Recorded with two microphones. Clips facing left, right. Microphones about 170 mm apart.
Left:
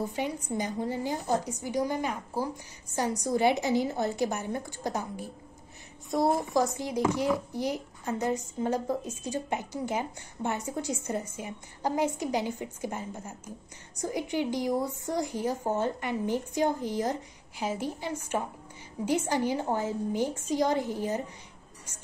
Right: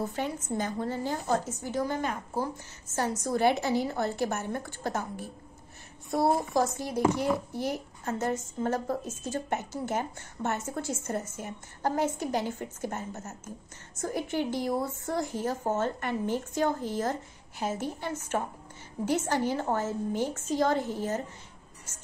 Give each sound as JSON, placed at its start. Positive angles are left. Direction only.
{"t": 0.0, "sound": "a woman's voice", "side_deg": 15}
{"t": 7.3, "sound": "a woman's voice", "side_deg": 15}